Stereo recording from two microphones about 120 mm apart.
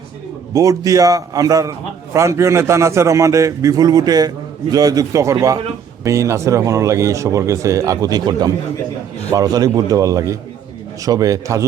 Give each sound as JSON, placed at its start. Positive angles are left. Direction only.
{"t": 0.5, "sound": "speech", "side_deg": -30}